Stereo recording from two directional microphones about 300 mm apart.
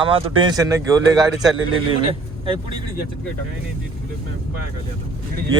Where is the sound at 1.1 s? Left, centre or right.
Centre.